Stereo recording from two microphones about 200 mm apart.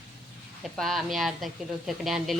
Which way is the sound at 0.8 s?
Centre (ahead or behind).